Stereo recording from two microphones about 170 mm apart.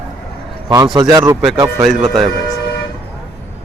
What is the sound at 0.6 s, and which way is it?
Speech, 25° right (ahead or behind).